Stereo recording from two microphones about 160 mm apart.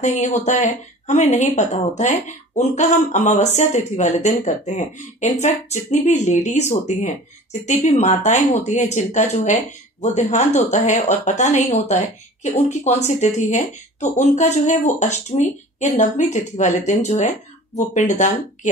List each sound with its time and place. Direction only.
0.0 s a woman's voice: 50° left (ahead or behind)